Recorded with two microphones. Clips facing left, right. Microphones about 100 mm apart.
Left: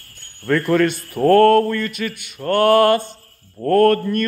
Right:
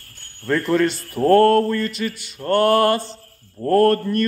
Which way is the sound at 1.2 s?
5° left (ahead or behind).